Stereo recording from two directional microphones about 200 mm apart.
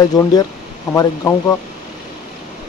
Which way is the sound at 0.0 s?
20° left (ahead or behind).